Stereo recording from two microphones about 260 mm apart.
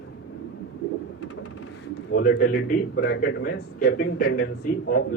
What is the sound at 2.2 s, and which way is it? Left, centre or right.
Speech, left.